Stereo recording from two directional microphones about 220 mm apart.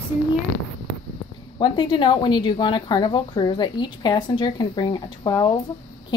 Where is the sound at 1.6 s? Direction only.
20° left (ahead or behind).